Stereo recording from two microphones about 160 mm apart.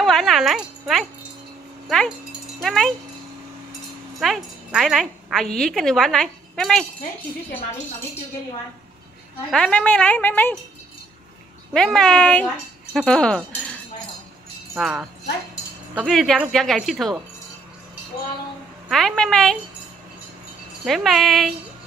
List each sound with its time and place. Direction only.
0.0 s a woman's voice: centre (ahead or behind)
4.2 s a woman's voice: centre (ahead or behind)
9.5 s speech: 5° left (ahead or behind)
11.7 s a woman's voice: 5° left (ahead or behind)
14.8 s a woman's voice: 5° right (ahead or behind)
18.9 s a woman's voice: 5° left (ahead or behind)
20.8 s a woman's voice: centre (ahead or behind)